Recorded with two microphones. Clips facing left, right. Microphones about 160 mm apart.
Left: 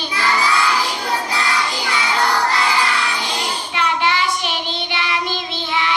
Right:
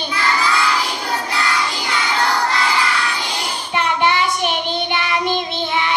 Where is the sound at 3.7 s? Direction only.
50° right (ahead or behind).